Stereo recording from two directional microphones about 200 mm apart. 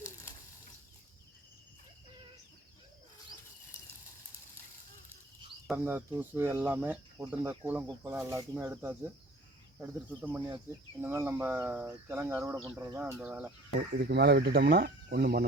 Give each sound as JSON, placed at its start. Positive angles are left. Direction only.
{"t": 0.0, "sound": "a sound", "side_deg": 15}
{"t": 5.7, "sound": "speech", "side_deg": -10}
{"t": 14.0, "sound": "speech", "side_deg": -55}